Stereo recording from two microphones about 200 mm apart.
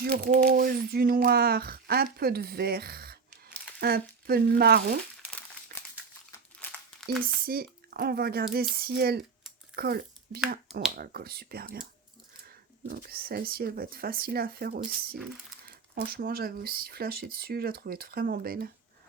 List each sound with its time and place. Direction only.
0.0 s speech: 50° right (ahead or behind)
6.3 s crumpling: 10° left (ahead or behind)
7.4 s speech: 50° right (ahead or behind)
12.9 s speech: 50° right (ahead or behind)